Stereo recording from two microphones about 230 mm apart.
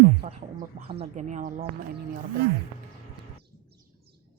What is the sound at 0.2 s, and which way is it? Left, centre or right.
Speech, right.